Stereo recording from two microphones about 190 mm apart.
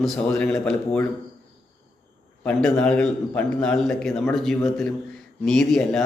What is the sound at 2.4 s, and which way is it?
A man's voice, 5° left (ahead or behind).